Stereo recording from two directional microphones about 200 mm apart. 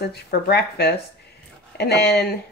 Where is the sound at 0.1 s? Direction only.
55° left (ahead or behind).